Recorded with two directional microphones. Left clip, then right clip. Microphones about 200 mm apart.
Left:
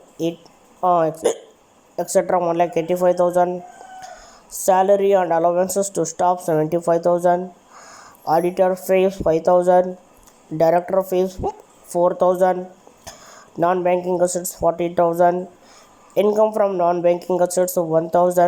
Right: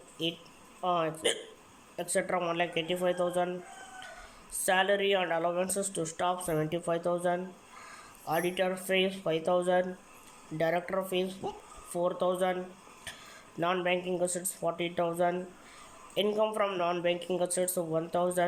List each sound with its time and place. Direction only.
0.2 s speech: 25° left (ahead or behind)
4.6 s speech: 25° left (ahead or behind)
13.1 s a sound: 25° left (ahead or behind)
13.6 s speech: 25° left (ahead or behind)